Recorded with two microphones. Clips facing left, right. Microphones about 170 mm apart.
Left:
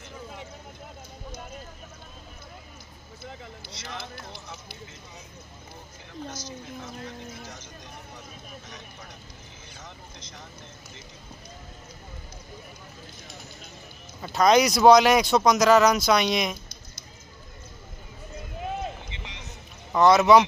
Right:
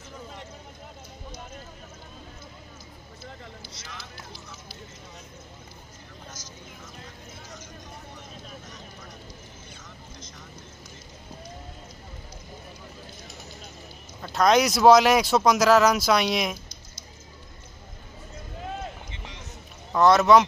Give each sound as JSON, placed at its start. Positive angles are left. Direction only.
{"t": 3.7, "sound": "speech", "side_deg": 60}
{"t": 6.3, "sound": "a woman's voice", "side_deg": 70}
{"t": 14.2, "sound": "speech", "side_deg": 0}
{"t": 19.0, "sound": "a sound", "side_deg": 85}
{"t": 19.9, "sound": "speech", "side_deg": 0}